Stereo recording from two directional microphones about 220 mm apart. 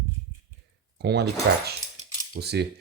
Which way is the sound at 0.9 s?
50° right (ahead or behind).